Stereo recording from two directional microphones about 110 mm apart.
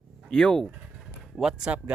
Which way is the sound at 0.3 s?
5° left (ahead or behind).